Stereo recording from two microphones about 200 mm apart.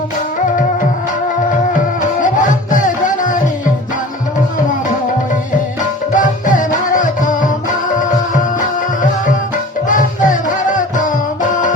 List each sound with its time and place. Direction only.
2.0 s music: 40° left (ahead or behind)
6.1 s music: 40° left (ahead or behind)
9.9 s music: 40° left (ahead or behind)